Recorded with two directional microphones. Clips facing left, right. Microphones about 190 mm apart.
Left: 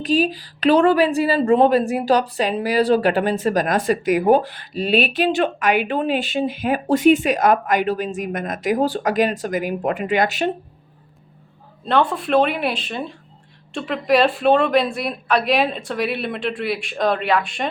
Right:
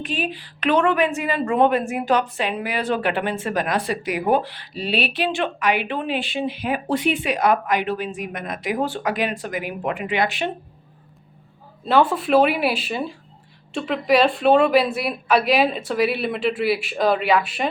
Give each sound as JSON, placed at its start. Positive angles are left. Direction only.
{"t": 0.0, "sound": "speech", "side_deg": 35}
{"t": 11.9, "sound": "speech", "side_deg": -5}